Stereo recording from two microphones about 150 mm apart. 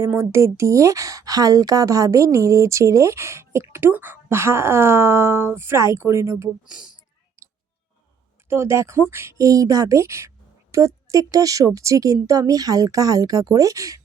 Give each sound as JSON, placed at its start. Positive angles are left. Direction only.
{"t": 0.0, "sound": "a woman's voice", "side_deg": -15}
{"t": 6.7, "sound": "speech", "side_deg": -5}
{"t": 8.4, "sound": "a woman's voice", "side_deg": -15}